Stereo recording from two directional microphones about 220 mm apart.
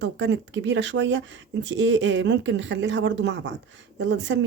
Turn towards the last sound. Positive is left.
turn(degrees=-55)  # may be behind; listen again after turning